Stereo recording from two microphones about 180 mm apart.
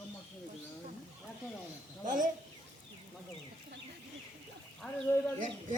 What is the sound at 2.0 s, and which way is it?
Speech, 45° right (ahead or behind).